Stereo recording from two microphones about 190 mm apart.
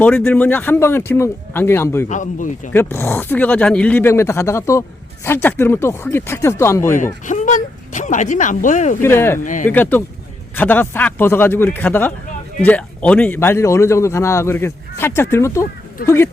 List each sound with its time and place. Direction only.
0.0 s speech: 5° left (ahead or behind)
2.0 s speech: 40° left (ahead or behind)
2.7 s speech: 10° left (ahead or behind)
6.9 s speech: 40° left (ahead or behind)
9.0 s speech: 10° left (ahead or behind)
9.4 s speech: 45° left (ahead or behind)
9.6 s speech: 10° left (ahead or behind)